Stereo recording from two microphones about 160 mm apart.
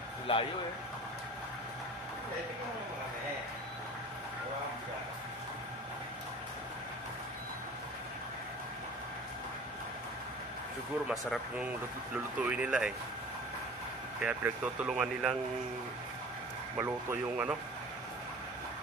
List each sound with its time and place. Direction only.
0.3 s speech: 35° left (ahead or behind)
11.1 s speech: centre (ahead or behind)
14.2 s speech: 10° right (ahead or behind)
16.7 s speech: 10° right (ahead or behind)